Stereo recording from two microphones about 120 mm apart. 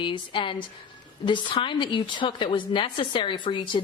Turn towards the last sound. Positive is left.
turn(degrees=40)  # may be behind; listen again after turning